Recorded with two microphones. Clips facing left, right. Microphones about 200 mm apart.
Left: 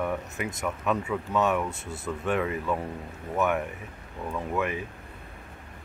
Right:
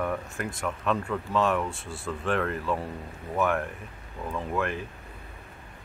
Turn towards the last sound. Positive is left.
turn(degrees=5)  # may be behind; listen again after turning